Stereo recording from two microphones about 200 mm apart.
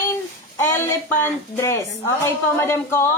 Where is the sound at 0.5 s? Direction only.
15° left (ahead or behind).